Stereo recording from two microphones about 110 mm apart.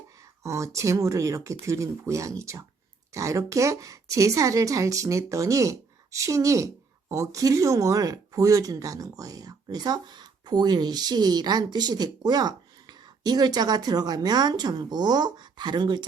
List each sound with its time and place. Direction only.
0.4 s a woman's voice: 25° right (ahead or behind); by 16.0 s 45° right (ahead or behind)